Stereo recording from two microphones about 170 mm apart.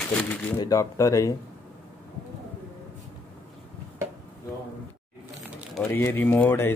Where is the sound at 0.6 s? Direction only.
20° left (ahead or behind).